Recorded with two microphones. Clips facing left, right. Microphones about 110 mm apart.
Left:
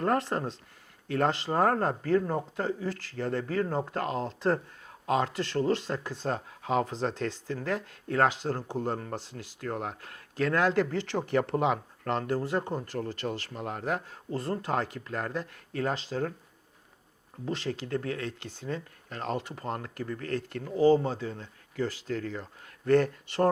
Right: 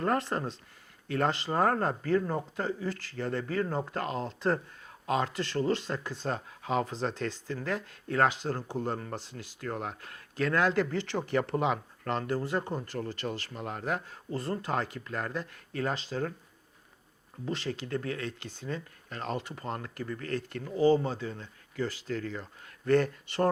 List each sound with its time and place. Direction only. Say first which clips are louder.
0.0 s speech: left 2 dB; 45° left (ahead or behind)
5.0 s speech: left 2 dB; 55° left (ahead or behind)
5.9 s speech: left 2 dB; 40° left (ahead or behind)
8.6 s speech: left 1 dB; 30° left (ahead or behind)
8.9 s speech: left 2 dB; 40° left (ahead or behind)
12.5 s speech: left 2 dB; 30° left (ahead or behind)
12.8 s speech: left 2 dB; 50° left (ahead or behind)
17.5 s speech: left 2 dB; 60° left (ahead or behind)